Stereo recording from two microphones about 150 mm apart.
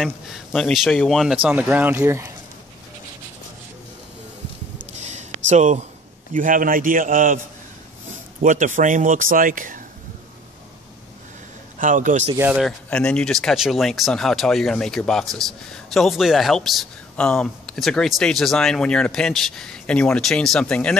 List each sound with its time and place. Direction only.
0.5 s speech: 5° left (ahead or behind); by 2.3 s 15° right (ahead or behind)
4.9 s a sound: 50° right (ahead or behind)
6.3 s speech: 65° right (ahead or behind)
11.8 s speech: 60° right (ahead or behind)
12.4 s speech: 10° right (ahead or behind)
12.6 s speech: 5° left (ahead or behind)